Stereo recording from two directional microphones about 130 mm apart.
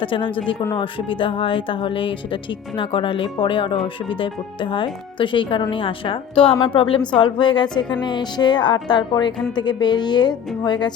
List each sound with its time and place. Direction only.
0.0 s speech: 40° left (ahead or behind)